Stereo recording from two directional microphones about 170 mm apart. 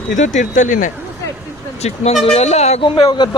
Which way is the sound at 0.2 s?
45° left (ahead or behind).